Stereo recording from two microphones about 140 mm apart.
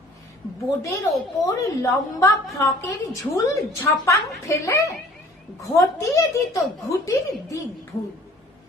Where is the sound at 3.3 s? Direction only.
20° left (ahead or behind).